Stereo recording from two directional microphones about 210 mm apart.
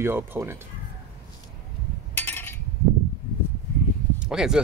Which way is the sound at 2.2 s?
10° left (ahead or behind).